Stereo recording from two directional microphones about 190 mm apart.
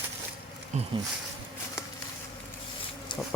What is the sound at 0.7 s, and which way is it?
Speech, 35° right (ahead or behind).